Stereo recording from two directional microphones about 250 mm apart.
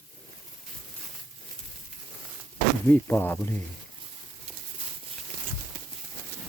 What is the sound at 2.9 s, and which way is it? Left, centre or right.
Speech, centre.